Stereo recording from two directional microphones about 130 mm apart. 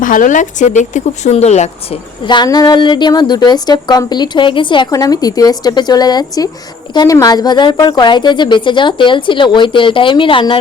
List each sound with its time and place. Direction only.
0.0 s speech: 90° left; by 2.0 s 60° left (ahead or behind)
2.2 s a woman's voice: 35° left (ahead or behind)
4.9 s a woman's voice: 30° left (ahead or behind)